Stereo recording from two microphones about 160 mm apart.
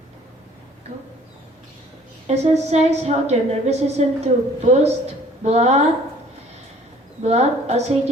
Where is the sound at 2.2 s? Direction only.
40° right (ahead or behind).